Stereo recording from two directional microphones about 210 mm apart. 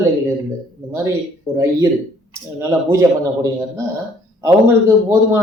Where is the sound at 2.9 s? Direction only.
15° right (ahead or behind).